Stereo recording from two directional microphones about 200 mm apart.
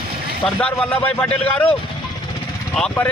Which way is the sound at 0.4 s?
5° left (ahead or behind).